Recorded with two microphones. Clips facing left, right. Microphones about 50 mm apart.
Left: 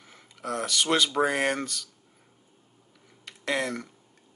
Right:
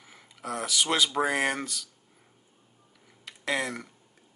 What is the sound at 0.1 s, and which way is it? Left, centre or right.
Speech, centre.